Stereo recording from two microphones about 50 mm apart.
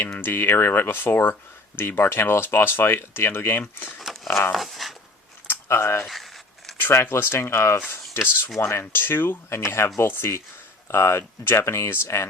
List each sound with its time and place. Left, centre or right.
0.0 s speech: left
4.1 s a sound: centre
4.5 s dog: centre
5.5 s a sound: left
6.7 s speech: left
11.6 s speech: left